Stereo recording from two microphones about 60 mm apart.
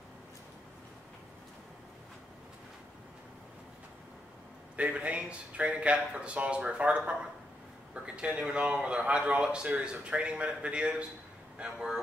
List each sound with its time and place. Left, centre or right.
4.7 s a man's voice: right